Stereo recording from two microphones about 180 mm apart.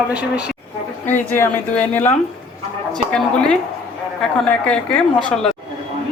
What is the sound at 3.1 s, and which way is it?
Speech, 5° left (ahead or behind).